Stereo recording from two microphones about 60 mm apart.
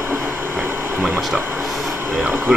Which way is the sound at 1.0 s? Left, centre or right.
Centre.